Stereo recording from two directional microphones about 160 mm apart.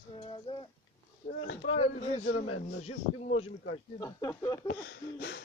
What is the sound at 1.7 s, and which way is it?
Speech, 45° left (ahead or behind).